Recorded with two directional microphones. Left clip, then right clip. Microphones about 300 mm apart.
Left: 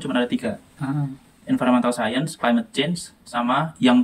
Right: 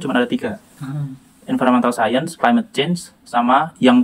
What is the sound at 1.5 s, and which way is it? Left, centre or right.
Speech, centre.